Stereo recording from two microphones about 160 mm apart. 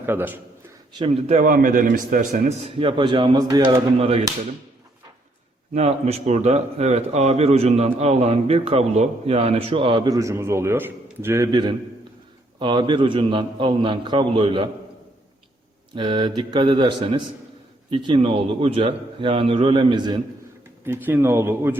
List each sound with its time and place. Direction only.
0.0 s a man's voice: 15° right (ahead or behind)
0.9 s speech: 35° right (ahead or behind)
1.5 s speech: 60° right (ahead or behind); by 3.8 s 25° right (ahead or behind)
3.9 s speech: 40° right (ahead or behind)
5.7 s speech: 40° right (ahead or behind); by 11.4 s 15° right (ahead or behind)
12.5 s speech: 30° right (ahead or behind)
16.0 s speech: 30° right (ahead or behind)
20.8 s a man's voice: 15° right (ahead or behind)